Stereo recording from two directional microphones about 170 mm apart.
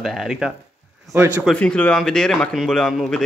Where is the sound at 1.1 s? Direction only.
15° right (ahead or behind).